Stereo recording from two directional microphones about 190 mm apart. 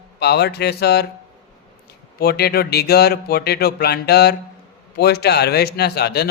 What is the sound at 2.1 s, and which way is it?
Speech, 55° left (ahead or behind).